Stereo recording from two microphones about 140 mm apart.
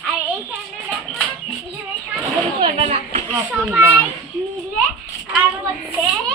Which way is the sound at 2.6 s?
45° right (ahead or behind).